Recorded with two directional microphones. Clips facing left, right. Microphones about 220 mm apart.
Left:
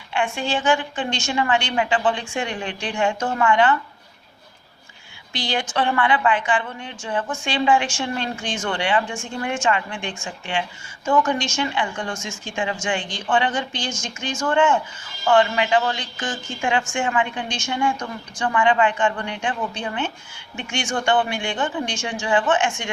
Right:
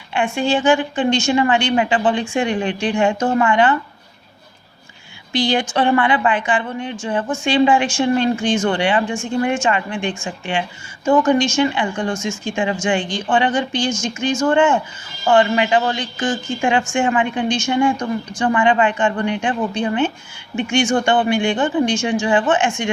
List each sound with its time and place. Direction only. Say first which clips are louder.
0.1 s speech: right 5 dB; 15° right (ahead or behind)
5.3 s speech: right 7 dB; 15° right (ahead or behind)
11.3 s speech: right 8 dB; 15° right (ahead or behind)